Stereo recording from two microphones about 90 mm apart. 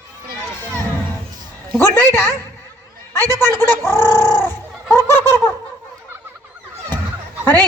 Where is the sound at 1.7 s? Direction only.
20° left (ahead or behind).